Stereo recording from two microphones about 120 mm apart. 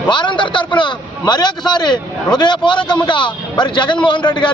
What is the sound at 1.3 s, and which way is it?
A man's voice, 35° left (ahead or behind).